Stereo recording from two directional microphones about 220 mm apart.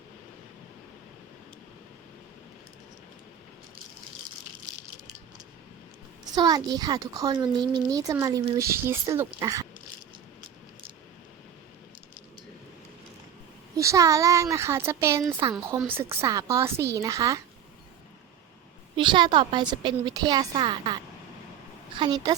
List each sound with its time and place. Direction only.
6.3 s a woman's voice: 15° right (ahead or behind)
13.7 s speech: 15° right (ahead or behind)
18.9 s a woman's voice: 20° right (ahead or behind)